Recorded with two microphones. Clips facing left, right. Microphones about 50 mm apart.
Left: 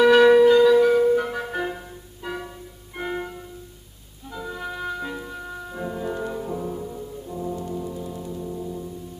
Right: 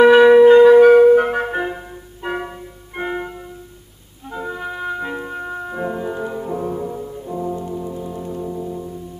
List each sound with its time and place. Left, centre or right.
0.0 s wind instrument: centre
0.5 s music: right
1.5 s flute: right
2.2 s music: right
3.0 s music: centre
4.6 s music: centre
6.0 s brass instrument: centre
8.3 s music: right